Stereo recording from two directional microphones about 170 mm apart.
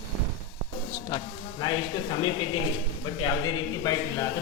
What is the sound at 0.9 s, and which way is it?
Speech, 25° left (ahead or behind).